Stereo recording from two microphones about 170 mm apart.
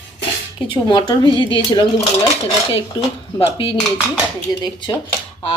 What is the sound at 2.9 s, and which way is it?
Speech, 30° left (ahead or behind).